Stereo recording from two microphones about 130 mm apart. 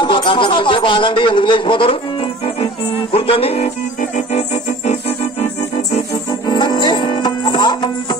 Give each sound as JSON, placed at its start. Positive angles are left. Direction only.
{"t": 0.0, "sound": "a man's voice", "side_deg": 40}
{"t": 2.4, "sound": "music", "side_deg": 45}
{"t": 6.5, "sound": "music", "side_deg": 35}